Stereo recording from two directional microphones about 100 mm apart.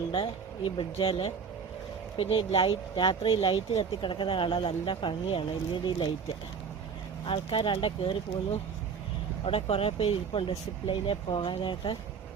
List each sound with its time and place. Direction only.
0.1 s speech: 60° left (ahead or behind)
7.3 s speech: 60° left (ahead or behind)
9.4 s speech: 75° left (ahead or behind); by 11.9 s 55° left (ahead or behind)